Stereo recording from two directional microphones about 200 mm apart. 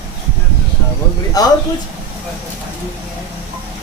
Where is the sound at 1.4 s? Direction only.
20° left (ahead or behind).